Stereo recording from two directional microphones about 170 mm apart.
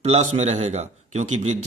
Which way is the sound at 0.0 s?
40° right (ahead or behind).